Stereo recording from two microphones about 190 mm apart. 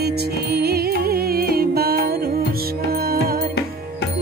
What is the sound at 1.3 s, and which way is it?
Music, 55° right (ahead or behind).